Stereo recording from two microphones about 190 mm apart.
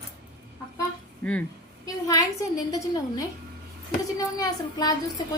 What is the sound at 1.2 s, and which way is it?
Speech, 5° left (ahead or behind).